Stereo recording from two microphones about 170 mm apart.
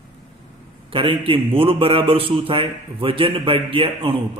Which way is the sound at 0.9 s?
30° right (ahead or behind).